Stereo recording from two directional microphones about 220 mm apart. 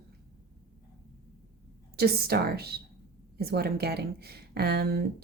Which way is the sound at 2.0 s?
45° right (ahead or behind).